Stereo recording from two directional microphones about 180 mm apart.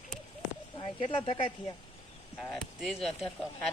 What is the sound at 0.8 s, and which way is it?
Speech, 30° left (ahead or behind).